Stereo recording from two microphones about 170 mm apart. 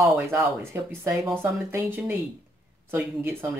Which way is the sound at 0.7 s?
15° right (ahead or behind).